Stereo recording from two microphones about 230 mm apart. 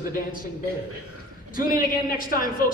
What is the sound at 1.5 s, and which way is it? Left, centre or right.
A man's voice, left.